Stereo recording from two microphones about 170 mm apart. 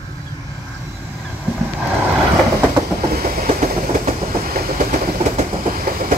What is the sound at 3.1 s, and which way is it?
Train, 60° right (ahead or behind).